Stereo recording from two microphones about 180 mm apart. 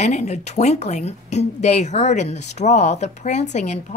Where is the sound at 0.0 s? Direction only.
40° left (ahead or behind).